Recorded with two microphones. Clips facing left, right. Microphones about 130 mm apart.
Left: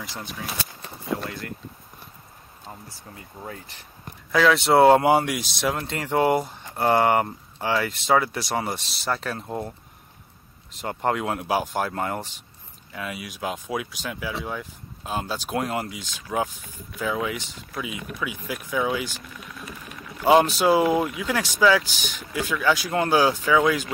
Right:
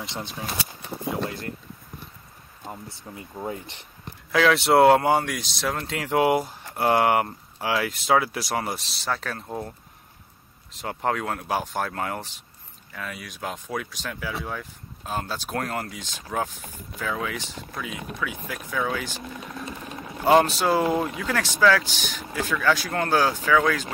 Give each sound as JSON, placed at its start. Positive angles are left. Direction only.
{"t": 0.0, "sound": "speech", "side_deg": -25}
{"t": 2.6, "sound": "speech", "side_deg": -20}
{"t": 4.3, "sound": "speech", "side_deg": 0}
{"t": 10.8, "sound": "speech", "side_deg": 0}
{"t": 18.5, "sound": "speech", "side_deg": 10}
{"t": 19.0, "sound": "vehicle", "side_deg": -25}
{"t": 20.2, "sound": "speech", "side_deg": 0}